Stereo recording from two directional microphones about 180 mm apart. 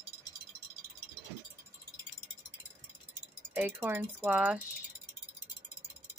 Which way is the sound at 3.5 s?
10° right (ahead or behind).